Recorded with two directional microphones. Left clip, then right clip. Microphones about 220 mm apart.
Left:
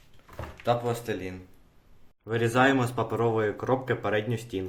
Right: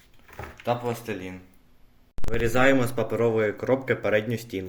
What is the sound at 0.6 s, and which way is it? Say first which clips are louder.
Speech: left 1 dB; 10° left (ahead or behind).